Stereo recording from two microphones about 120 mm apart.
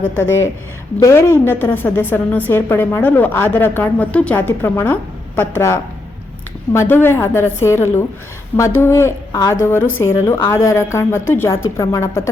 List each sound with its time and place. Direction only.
0.0 s a woman's voice: 20° left (ahead or behind)